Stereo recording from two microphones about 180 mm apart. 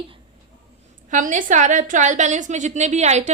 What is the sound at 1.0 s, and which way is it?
A woman's voice, 45° right (ahead or behind).